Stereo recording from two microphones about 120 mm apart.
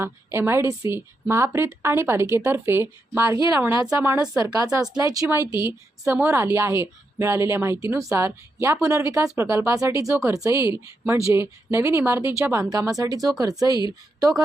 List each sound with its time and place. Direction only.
0.0 s a woman's voice: 20° right (ahead or behind)
4.6 s a woman's voice: 30° right (ahead or behind)
5.6 s a woman's voice: 15° right (ahead or behind)